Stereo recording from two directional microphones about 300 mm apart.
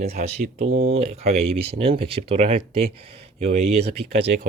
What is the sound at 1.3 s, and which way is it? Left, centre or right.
Speech, right.